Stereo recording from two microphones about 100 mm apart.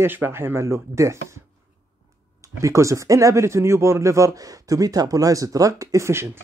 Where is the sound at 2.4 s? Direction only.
30° right (ahead or behind).